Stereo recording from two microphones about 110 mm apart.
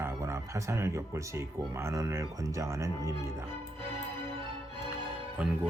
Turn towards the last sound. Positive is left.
turn(degrees=-15)  # may be behind; listen again after turning